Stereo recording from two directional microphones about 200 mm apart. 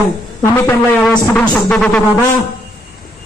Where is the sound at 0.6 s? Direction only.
5° left (ahead or behind).